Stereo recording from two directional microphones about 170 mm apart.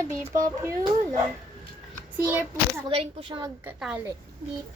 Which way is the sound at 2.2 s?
10° right (ahead or behind).